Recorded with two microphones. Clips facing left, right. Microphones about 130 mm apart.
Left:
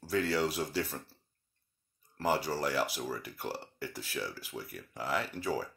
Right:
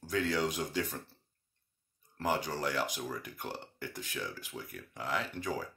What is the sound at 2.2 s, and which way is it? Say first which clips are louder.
Speech: left 2 dB; 5° left (ahead or behind).